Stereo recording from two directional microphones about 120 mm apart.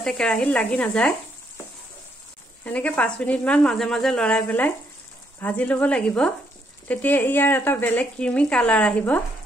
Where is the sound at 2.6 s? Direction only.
10° left (ahead or behind).